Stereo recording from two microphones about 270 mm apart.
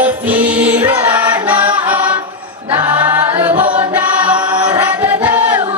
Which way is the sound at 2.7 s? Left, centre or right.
Centre.